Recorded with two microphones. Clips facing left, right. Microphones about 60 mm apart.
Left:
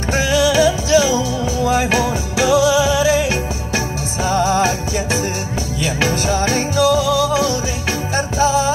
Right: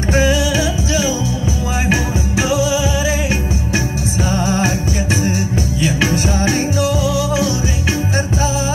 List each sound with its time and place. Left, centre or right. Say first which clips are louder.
2.3 s music: left 4 dB; left
4.3 s music: left 4 dB; left
6.4 s music: left 1 dB; left